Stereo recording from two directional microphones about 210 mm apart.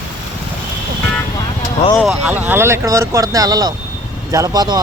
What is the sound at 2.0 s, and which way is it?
A man's voice, centre (ahead or behind).